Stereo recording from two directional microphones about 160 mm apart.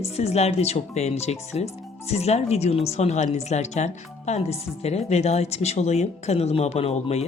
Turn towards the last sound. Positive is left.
turn(degrees=40)  # may be behind; listen again after turning